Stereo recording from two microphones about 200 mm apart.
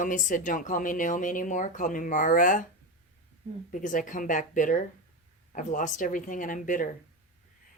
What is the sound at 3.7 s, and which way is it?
A woman's voice, 40° left (ahead or behind).